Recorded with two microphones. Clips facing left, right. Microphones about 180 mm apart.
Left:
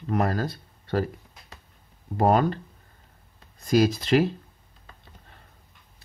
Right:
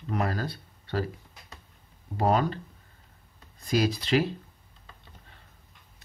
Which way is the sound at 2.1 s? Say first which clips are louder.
Left 4 dB; 50° left (ahead or behind).